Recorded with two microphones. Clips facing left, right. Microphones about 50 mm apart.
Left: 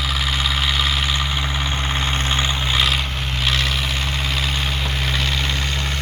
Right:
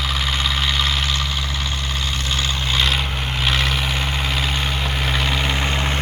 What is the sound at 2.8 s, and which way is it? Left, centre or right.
Vehicle, centre.